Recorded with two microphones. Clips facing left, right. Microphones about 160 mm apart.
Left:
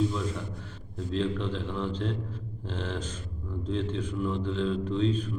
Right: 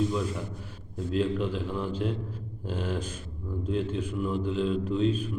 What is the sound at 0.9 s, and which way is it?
A man's voice, 10° right (ahead or behind).